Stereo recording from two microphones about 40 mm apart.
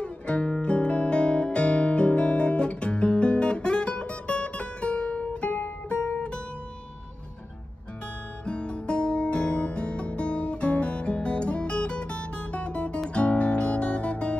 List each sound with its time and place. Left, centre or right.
0.0 s guitar: left
5.2 s music: left
8.5 s guitar: left